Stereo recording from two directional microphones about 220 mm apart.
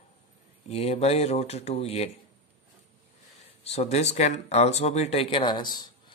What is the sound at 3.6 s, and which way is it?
Speech, 30° left (ahead or behind).